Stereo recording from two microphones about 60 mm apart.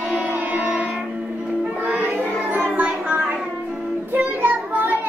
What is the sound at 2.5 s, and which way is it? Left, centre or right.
Music, right.